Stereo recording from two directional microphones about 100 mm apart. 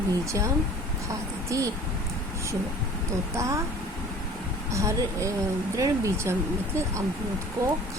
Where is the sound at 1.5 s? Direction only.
30° right (ahead or behind).